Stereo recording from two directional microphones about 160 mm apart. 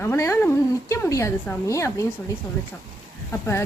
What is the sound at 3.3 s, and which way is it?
Speech, 15° left (ahead or behind).